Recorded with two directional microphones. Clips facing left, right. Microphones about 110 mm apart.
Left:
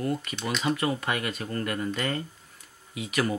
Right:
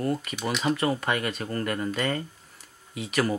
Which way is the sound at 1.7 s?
45° right (ahead or behind).